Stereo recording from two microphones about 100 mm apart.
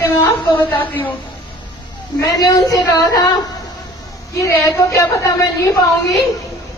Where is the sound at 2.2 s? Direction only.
35° left (ahead or behind).